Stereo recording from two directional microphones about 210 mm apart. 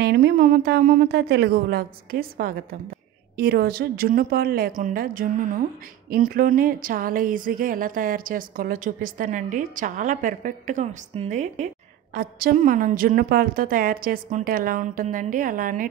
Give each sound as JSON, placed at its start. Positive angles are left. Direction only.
{"t": 0.0, "sound": "a woman's voice", "side_deg": -50}